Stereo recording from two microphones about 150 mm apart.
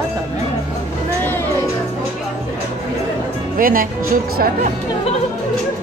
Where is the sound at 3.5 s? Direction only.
70° right (ahead or behind).